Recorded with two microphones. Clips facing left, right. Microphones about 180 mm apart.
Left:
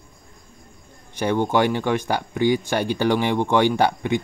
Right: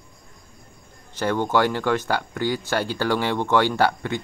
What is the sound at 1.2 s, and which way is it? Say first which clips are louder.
Speech: left 1 dB; 15° left (ahead or behind).